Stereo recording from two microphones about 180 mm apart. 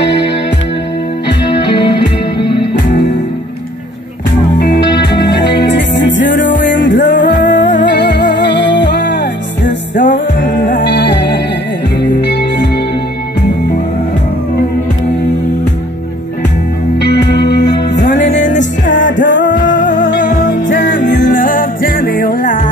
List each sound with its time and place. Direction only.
1.5 s music: 25° left (ahead or behind)
4.6 s music: 70° left (ahead or behind)
6.6 s music: 90° left; by 12.6 s 70° left (ahead or behind)
17.0 s music: 70° left (ahead or behind)
18.3 s music: 45° left (ahead or behind)